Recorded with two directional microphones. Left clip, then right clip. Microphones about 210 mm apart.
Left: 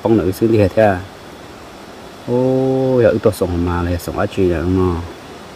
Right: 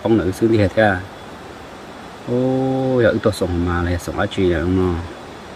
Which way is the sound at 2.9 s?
25° left (ahead or behind).